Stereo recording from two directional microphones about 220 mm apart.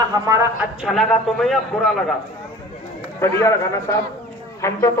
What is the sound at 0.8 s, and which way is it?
A man's voice, centre (ahead or behind).